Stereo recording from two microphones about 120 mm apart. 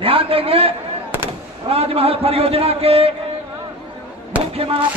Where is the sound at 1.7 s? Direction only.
55° right (ahead or behind).